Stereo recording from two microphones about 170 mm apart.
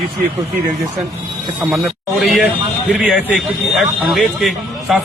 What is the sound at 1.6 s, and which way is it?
A man's voice, centre (ahead or behind).